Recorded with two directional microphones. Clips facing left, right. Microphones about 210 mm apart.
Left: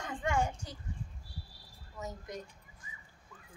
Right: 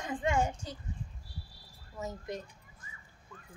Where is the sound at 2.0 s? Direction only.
25° right (ahead or behind).